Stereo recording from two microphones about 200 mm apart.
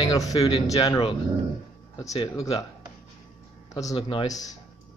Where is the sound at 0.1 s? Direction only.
20° left (ahead or behind).